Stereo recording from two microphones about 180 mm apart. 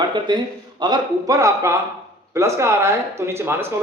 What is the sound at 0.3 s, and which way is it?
Speech, 25° right (ahead or behind).